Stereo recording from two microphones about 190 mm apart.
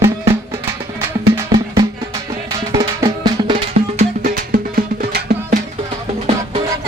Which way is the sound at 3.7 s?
40° right (ahead or behind).